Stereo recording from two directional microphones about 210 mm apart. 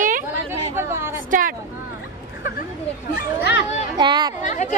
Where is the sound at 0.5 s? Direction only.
10° right (ahead or behind).